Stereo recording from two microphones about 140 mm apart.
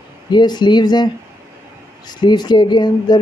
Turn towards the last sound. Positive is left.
turn(degrees=30)  # may be behind; listen again after turning